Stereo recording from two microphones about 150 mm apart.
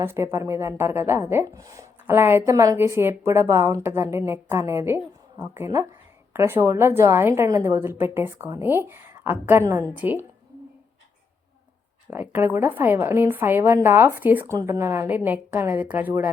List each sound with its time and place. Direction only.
0.0 s a woman's voice: 15° right (ahead or behind)
12.1 s a woman's voice: 15° right (ahead or behind)